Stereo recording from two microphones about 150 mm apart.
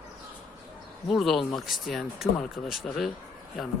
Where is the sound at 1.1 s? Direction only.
Centre (ahead or behind).